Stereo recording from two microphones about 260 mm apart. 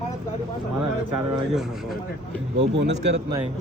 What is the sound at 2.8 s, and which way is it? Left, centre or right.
Speech, right.